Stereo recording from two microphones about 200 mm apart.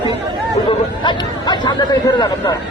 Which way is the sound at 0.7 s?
25° left (ahead or behind).